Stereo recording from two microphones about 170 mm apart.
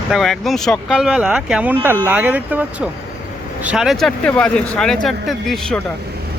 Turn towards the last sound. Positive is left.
turn(degrees=0)  # may be behind; listen again after turning